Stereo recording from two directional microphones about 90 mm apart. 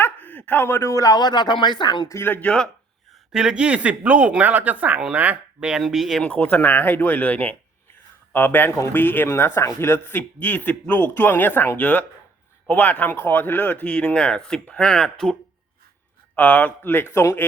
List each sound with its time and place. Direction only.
0.0 s a man's voice: 20° left (ahead or behind); by 2.0 s 55° left (ahead or behind)
2.0 s speech: 30° left (ahead or behind)
3.3 s speech: 10° right (ahead or behind)
5.8 s speech: centre (ahead or behind)
6.2 s speech: 15° left (ahead or behind)
16.3 s speech: 15° left (ahead or behind)